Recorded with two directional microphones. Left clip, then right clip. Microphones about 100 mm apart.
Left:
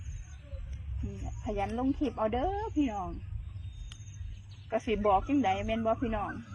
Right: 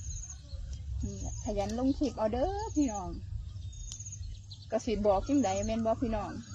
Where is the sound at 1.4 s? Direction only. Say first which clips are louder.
Even; 30° right (ahead or behind).